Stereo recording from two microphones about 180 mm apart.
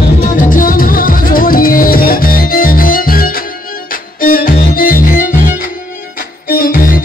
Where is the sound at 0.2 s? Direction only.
50° left (ahead or behind).